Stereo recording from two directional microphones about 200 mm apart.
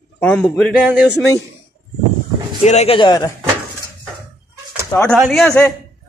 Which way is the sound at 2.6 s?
35° left (ahead or behind).